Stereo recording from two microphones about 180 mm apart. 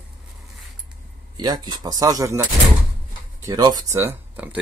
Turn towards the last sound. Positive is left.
turn(degrees=-10)  # may be behind; listen again after turning